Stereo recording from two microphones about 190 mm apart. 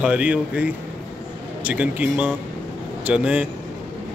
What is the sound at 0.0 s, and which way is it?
Speech, 5° right (ahead or behind).